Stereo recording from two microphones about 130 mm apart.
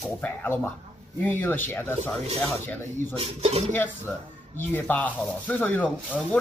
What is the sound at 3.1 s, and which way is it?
Speech, 50° right (ahead or behind).